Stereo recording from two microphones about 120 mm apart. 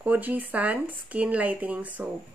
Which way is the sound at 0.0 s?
15° right (ahead or behind).